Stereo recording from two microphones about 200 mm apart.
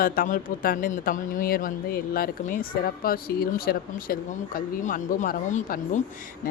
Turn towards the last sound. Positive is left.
turn(degrees=40)  # may be behind; listen again after turning